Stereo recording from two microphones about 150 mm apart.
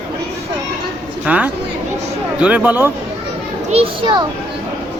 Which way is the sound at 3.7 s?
40° right (ahead or behind).